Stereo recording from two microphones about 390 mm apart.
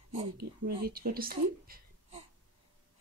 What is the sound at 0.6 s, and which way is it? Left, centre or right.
Speech, right.